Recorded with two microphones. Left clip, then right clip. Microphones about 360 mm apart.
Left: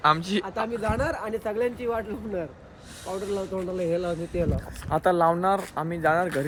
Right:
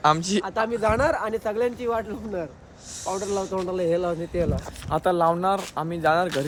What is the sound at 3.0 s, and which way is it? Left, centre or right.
Speech, right.